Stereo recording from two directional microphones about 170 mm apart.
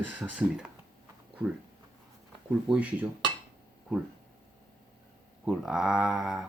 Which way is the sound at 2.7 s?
10° right (ahead or behind).